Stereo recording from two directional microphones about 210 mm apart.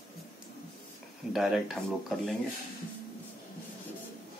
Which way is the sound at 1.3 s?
Centre (ahead or behind).